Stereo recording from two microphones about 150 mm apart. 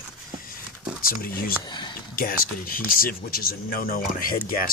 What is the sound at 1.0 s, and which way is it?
Speech, 70° left (ahead or behind).